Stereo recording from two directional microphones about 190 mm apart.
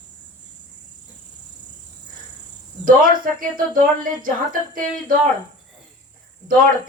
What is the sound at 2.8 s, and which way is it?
Speech, 45° right (ahead or behind).